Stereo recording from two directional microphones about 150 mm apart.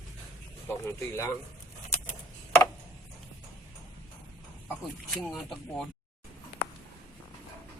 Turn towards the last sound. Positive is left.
turn(degrees=0)  # may be behind; listen again after turning